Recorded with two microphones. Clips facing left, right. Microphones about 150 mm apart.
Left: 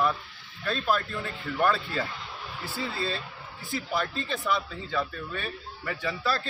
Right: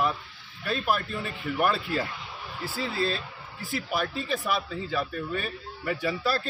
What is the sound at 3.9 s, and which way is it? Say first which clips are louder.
Speech: right 1 dB; 10° right (ahead or behind).